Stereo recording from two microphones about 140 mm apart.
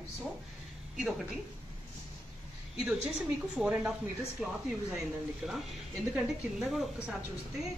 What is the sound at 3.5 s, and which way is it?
A woman's voice, 10° right (ahead or behind).